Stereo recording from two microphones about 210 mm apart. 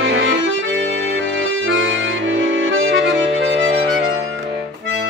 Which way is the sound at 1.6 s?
65° right (ahead or behind).